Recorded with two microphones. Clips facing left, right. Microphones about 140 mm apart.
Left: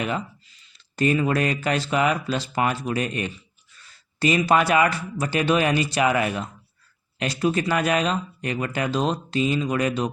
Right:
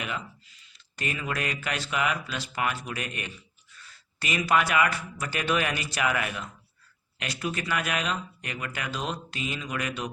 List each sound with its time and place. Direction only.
0.9 s speech: 35° left (ahead or behind)